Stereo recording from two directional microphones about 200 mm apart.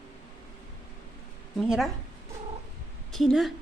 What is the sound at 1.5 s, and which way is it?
Speech, centre (ahead or behind).